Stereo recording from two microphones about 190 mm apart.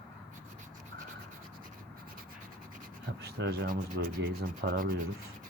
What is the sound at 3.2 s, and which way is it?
Rub, 55° right (ahead or behind).